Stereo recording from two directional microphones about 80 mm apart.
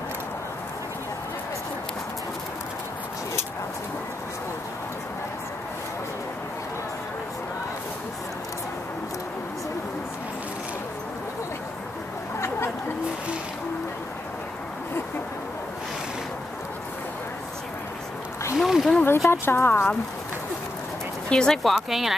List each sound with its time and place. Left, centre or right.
12.4 s chatter: left
18.6 s a sound: centre
19.0 s clip-clop: left
19.4 s speech: left
21.3 s speech: centre
21.7 s speech: centre